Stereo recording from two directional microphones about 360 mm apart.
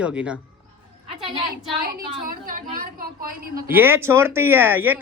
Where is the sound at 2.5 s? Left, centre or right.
Right.